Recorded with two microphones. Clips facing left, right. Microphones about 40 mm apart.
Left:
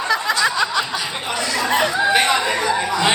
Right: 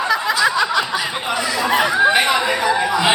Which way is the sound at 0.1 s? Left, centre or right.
Centre.